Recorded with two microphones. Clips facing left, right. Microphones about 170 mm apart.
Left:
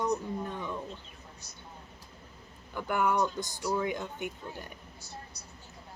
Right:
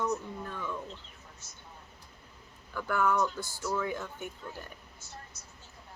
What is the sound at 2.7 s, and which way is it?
Speech, 20° left (ahead or behind).